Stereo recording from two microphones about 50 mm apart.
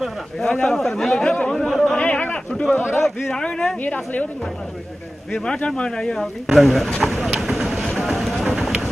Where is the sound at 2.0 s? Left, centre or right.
Left.